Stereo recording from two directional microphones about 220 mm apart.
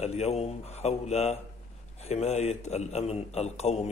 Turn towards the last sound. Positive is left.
turn(degrees=30)  # may be behind; listen again after turning